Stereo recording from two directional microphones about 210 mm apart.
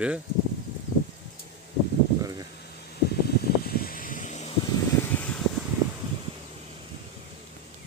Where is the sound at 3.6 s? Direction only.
45° left (ahead or behind).